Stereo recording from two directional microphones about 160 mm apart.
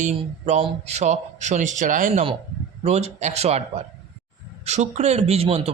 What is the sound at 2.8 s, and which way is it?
A man's voice, 45° right (ahead or behind).